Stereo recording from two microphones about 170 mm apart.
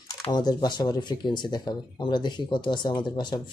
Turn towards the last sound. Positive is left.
turn(degrees=25)  # may be behind; listen again after turning